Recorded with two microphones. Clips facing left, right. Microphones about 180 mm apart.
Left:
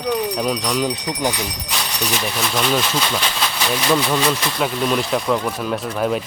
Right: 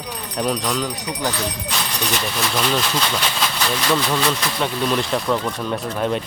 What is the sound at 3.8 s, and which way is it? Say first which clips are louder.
Speech: left 2 dB; 5° left (ahead or behind).